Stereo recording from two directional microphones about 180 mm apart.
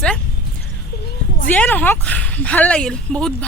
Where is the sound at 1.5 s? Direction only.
10° left (ahead or behind).